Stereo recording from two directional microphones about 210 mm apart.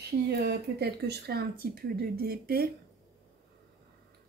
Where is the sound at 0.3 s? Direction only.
50° right (ahead or behind).